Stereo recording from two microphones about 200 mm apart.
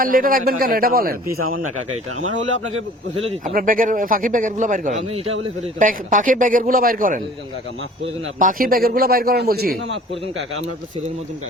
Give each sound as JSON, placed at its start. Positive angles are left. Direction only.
{"t": 0.0, "sound": "a man's voice", "side_deg": -45}
{"t": 2.2, "sound": "speech", "side_deg": -90}
{"t": 3.5, "sound": "a man's voice", "side_deg": -45}
{"t": 8.4, "sound": "a man's voice", "side_deg": -45}